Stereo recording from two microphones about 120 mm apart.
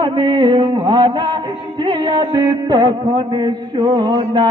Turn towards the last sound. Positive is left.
turn(degrees=-35)  # may be behind; listen again after turning